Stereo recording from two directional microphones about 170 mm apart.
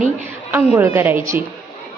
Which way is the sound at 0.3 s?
10° right (ahead or behind).